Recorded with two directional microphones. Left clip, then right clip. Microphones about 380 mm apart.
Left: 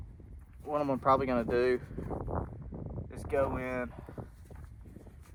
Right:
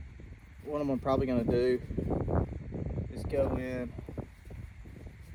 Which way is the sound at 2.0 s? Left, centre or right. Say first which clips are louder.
Right 5 dB; right.